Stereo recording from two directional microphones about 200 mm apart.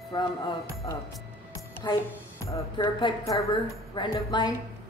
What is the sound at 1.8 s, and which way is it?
A woman's voice, 20° left (ahead or behind).